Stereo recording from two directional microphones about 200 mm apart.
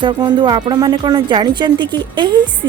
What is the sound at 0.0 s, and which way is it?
A woman's voice, 20° right (ahead or behind).